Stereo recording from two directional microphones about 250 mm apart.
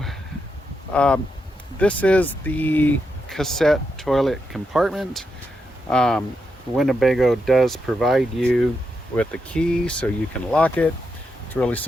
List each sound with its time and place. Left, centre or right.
0.9 s speech: centre